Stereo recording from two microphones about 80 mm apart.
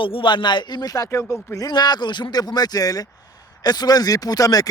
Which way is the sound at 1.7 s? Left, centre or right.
Left.